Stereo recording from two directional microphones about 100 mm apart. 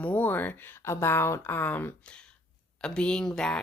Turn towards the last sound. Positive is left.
turn(degrees=5)  # may be behind; listen again after turning